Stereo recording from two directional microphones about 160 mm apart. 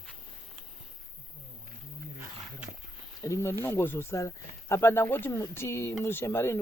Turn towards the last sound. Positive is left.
turn(degrees=15)  # may be behind; listen again after turning